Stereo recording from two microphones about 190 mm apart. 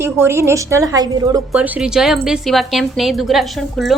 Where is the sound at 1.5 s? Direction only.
5° right (ahead or behind).